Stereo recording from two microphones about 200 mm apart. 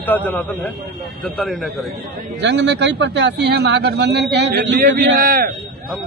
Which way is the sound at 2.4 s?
60° right (ahead or behind).